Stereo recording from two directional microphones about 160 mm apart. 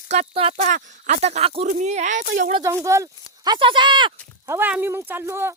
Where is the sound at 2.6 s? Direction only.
20° right (ahead or behind).